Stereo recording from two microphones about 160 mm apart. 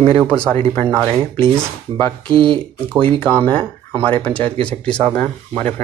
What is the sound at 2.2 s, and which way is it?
Speech, 30° right (ahead or behind).